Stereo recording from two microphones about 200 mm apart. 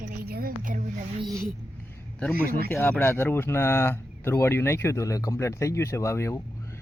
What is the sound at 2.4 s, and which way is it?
Speech, 50° right (ahead or behind).